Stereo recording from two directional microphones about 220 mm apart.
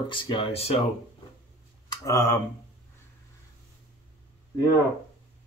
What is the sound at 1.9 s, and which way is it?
Speech, 15° left (ahead or behind).